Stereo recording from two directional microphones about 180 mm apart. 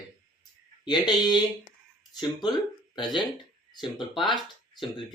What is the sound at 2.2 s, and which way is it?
Speech, 25° left (ahead or behind).